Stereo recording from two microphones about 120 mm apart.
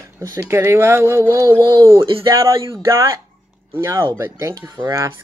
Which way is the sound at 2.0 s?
45° right (ahead or behind).